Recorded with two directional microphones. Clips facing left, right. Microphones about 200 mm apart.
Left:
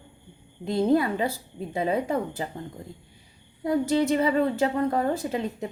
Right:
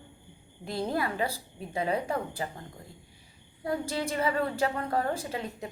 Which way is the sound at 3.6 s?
20° left (ahead or behind).